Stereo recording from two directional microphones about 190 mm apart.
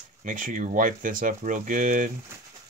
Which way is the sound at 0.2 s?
45° right (ahead or behind).